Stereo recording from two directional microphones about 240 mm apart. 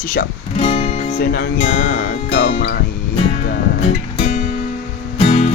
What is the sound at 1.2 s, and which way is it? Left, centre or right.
Music, left.